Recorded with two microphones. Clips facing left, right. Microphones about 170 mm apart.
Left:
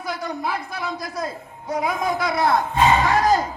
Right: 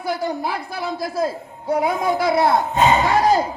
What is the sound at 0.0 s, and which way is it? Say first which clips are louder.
A man's voice: right 4 dB; 30° right (ahead or behind).